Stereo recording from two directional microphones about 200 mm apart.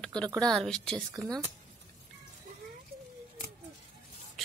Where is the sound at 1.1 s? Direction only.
20° right (ahead or behind).